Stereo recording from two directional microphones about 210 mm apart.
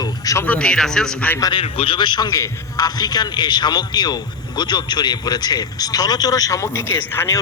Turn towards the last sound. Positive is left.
turn(degrees=10)  # may be behind; listen again after turning